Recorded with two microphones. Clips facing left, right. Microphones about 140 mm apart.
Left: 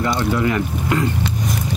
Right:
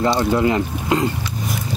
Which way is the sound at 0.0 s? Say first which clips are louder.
Right 2 dB; 20° right (ahead or behind).